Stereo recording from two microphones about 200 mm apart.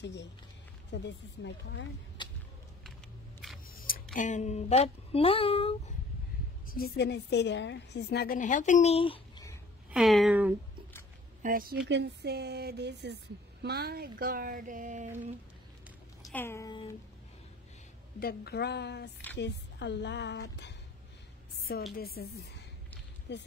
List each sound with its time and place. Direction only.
0.0 s speech: 60° left (ahead or behind)
2.2 s a sound: 25° left (ahead or behind)
3.7 s speech: 45° left (ahead or behind); by 5.9 s 30° left (ahead or behind)
6.7 s a woman's voice: 50° left (ahead or behind); by 9.5 s 25° left (ahead or behind)
9.8 s speech: centre (ahead or behind)
11.4 s speech: 45° right (ahead or behind)
11.9 s speech: 55° right (ahead or behind); by 15.0 s 40° right (ahead or behind)
16.3 s speech: 10° left (ahead or behind)
18.2 s speech: 55° left (ahead or behind)
21.9 s a woman's voice: 50° left (ahead or behind)
23.3 s speech: 60° left (ahead or behind)